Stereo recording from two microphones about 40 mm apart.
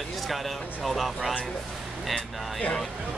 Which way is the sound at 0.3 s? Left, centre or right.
Centre.